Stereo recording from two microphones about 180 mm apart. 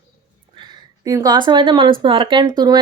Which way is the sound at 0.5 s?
25° right (ahead or behind).